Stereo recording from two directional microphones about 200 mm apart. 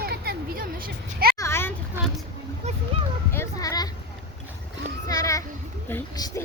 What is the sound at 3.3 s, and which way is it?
Speech, 15° left (ahead or behind).